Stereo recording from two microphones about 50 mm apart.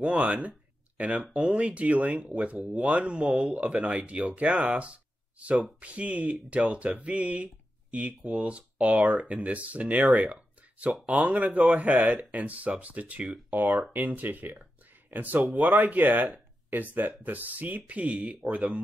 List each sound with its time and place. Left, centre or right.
0.0 s speech: right
13.5 s speech: right